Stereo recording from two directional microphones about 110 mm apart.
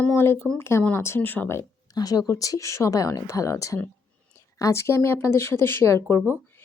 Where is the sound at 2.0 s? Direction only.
35° left (ahead or behind).